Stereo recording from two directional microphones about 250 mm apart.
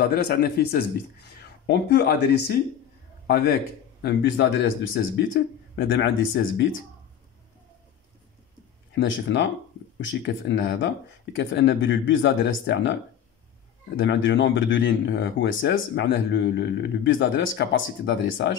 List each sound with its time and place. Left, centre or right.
0.0 s a man's voice: left
8.9 s speech: left